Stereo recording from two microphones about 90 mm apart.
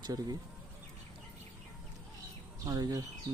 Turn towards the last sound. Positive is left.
turn(degrees=-45)  # may be behind; listen again after turning